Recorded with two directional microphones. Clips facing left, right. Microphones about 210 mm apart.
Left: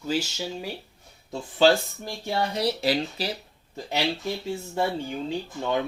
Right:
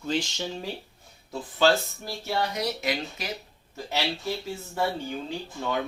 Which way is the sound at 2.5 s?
30° left (ahead or behind).